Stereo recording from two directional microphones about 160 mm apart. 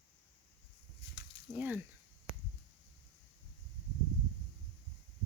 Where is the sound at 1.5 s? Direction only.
10° right (ahead or behind).